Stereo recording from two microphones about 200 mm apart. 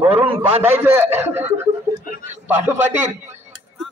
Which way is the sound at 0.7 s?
10° right (ahead or behind).